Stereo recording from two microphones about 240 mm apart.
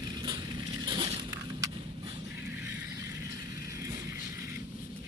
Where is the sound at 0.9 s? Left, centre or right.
Centre.